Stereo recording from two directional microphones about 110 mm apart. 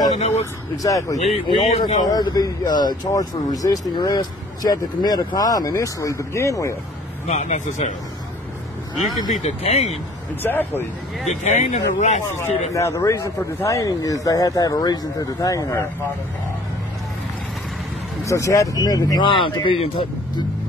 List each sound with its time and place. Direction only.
0.1 s speech: 90° left
0.8 s speech: 30° left (ahead or behind)
1.1 s speech: 85° left
1.8 s speech: 40° left (ahead or behind)
7.2 s speech: 90° left
9.4 s speech: 75° left (ahead or behind)
10.4 s speech: 20° left (ahead or behind)
11.2 s speech: 90° left
12.7 s speech: 30° left (ahead or behind)
18.2 s speech: 30° left (ahead or behind); by 19.9 s 50° left (ahead or behind)